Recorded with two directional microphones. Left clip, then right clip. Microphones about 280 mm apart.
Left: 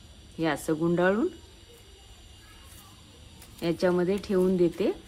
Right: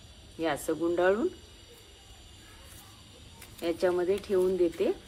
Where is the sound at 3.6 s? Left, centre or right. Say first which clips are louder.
Left 2 dB; left.